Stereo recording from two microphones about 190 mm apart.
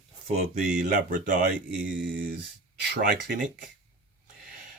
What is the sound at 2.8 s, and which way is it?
Speech, 55° right (ahead or behind).